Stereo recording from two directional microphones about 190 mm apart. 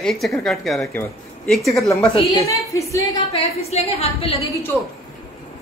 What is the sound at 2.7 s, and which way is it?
Speech, 15° left (ahead or behind).